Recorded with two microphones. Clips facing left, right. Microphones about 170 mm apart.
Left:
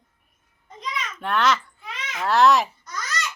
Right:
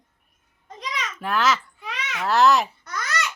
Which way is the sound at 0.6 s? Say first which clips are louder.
Left 1 dB; 90° right.